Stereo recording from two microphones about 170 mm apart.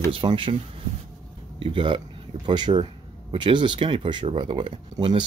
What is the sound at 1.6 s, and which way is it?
Speech, 30° right (ahead or behind).